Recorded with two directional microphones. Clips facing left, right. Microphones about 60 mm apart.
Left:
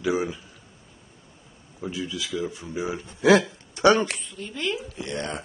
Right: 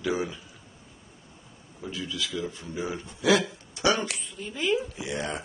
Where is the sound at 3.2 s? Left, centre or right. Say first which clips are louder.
Left 5 dB; left.